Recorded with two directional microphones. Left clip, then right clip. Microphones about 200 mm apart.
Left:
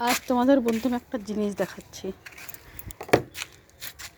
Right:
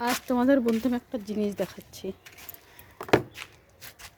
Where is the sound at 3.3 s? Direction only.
55° left (ahead or behind).